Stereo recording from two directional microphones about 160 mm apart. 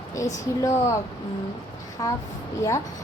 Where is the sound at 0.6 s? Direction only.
20° left (ahead or behind).